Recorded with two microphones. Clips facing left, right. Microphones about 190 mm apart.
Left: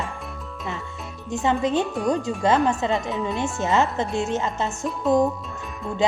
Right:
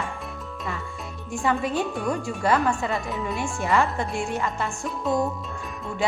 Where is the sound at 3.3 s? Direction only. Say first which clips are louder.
Left 1 dB; 20° left (ahead or behind).